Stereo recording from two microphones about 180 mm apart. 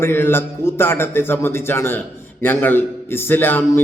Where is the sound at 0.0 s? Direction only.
10° left (ahead or behind).